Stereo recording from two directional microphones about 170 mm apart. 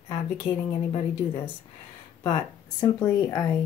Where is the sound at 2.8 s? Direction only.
20° left (ahead or behind).